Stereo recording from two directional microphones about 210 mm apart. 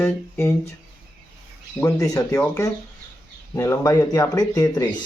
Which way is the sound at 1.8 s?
15° left (ahead or behind).